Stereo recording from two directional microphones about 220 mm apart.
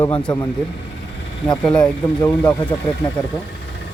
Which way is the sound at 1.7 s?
5° left (ahead or behind).